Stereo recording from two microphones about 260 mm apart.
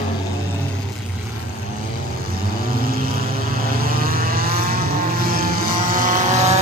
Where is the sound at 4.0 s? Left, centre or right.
Right.